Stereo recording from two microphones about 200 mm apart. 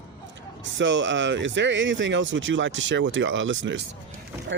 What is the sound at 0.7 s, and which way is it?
Speech, 70° right (ahead or behind).